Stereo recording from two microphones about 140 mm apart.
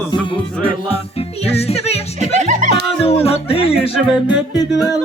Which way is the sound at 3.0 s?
45° left (ahead or behind).